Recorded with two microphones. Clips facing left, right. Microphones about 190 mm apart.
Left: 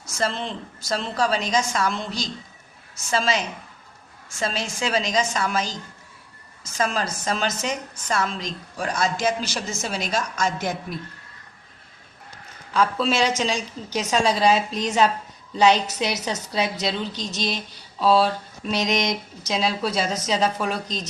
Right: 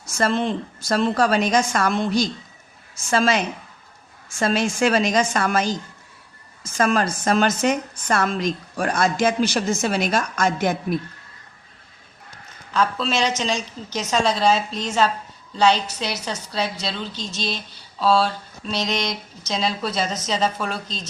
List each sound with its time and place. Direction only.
0.2 s a woman's voice: 55° right (ahead or behind)
12.7 s a woman's voice: 10° left (ahead or behind)